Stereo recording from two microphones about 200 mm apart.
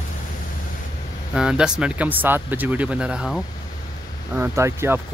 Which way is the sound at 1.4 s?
5° right (ahead or behind).